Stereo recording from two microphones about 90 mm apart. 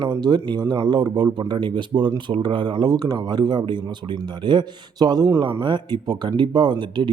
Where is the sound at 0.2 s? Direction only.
55° right (ahead or behind).